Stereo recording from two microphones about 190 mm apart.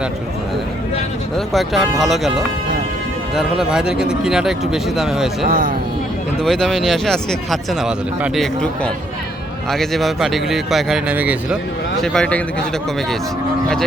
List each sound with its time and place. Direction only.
1.5 s speech: centre (ahead or behind)
3.3 s speech: 5° right (ahead or behind)
5.5 s speech: 45° right (ahead or behind)
6.4 s speech: centre (ahead or behind)
12.0 s speech: 5° left (ahead or behind)